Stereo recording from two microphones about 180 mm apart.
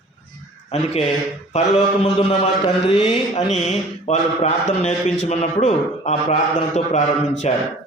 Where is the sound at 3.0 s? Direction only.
35° left (ahead or behind).